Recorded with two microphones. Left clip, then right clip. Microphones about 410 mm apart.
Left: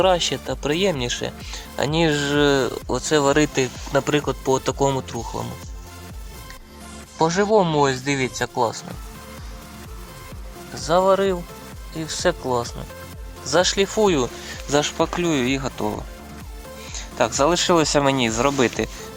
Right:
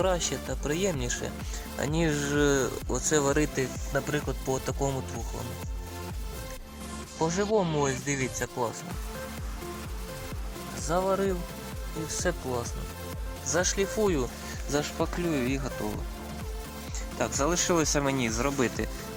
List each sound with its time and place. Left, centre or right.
0.0 s speech: left
7.2 s speech: left
10.8 s speech: left
16.9 s speech: left